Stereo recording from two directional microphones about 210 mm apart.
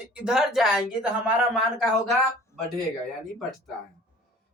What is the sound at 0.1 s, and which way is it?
Speech, centre (ahead or behind).